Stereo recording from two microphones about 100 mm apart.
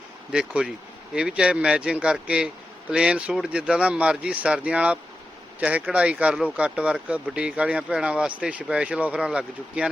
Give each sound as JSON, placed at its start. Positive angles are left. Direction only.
{"t": 0.3, "sound": "speech", "side_deg": -10}